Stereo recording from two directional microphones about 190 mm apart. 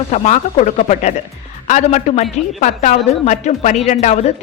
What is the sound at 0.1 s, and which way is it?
A woman's voice, 35° left (ahead or behind).